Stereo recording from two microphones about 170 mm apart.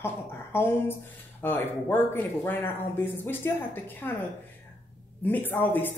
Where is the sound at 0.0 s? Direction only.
15° left (ahead or behind).